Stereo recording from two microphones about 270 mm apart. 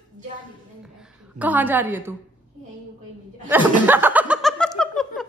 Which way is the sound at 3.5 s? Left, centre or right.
Centre.